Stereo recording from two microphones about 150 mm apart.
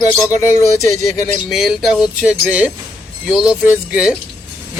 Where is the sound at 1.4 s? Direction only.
Centre (ahead or behind).